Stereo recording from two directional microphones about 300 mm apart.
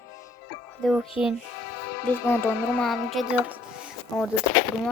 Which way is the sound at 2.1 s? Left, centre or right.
Centre.